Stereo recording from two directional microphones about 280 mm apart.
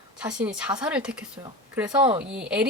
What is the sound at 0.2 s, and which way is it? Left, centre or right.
Speech, centre.